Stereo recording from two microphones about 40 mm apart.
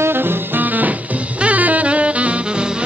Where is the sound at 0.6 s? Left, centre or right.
Right.